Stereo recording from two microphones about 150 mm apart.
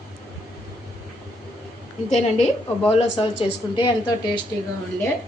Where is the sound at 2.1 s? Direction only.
50° left (ahead or behind).